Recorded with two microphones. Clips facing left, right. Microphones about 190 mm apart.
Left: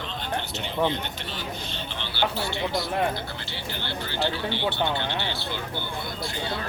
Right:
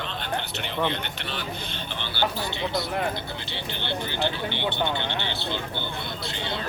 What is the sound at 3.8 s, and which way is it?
Speech, 20° right (ahead or behind).